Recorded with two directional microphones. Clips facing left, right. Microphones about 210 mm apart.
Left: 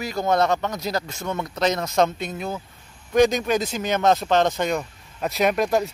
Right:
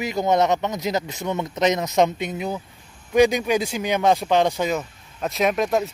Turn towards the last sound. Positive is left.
turn(degrees=0)  # may be behind; listen again after turning